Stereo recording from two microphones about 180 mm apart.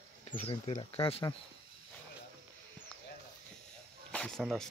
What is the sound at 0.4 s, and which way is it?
Speech, 35° left (ahead or behind).